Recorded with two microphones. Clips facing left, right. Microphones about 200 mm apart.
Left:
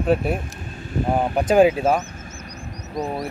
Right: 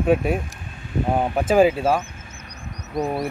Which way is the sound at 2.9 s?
10° right (ahead or behind).